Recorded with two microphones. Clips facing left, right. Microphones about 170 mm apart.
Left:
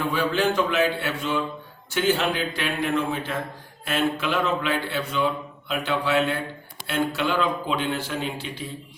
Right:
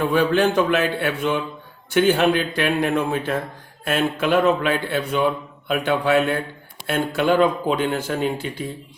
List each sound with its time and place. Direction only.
0.0 s a man's voice: 55° right (ahead or behind)